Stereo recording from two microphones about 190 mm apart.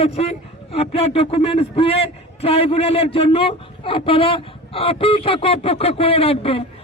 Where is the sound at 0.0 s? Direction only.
30° left (ahead or behind).